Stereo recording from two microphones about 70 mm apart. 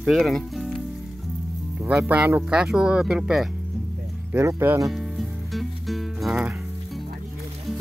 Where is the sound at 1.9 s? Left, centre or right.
Centre.